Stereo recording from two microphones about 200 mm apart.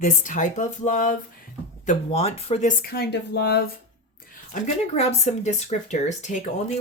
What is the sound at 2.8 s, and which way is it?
Speech, 50° left (ahead or behind).